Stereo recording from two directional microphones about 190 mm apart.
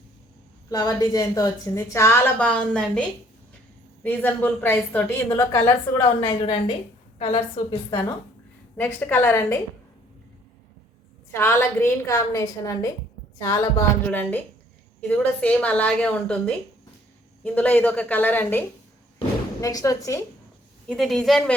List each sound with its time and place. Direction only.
0.7 s a woman's voice: 20° left (ahead or behind)
4.0 s a woman's voice: 10° left (ahead or behind)
11.3 s a woman's voice: 15° left (ahead or behind)
17.4 s a woman's voice: 10° left (ahead or behind)
19.6 s a woman's voice: 20° left (ahead or behind)
20.8 s speech: centre (ahead or behind)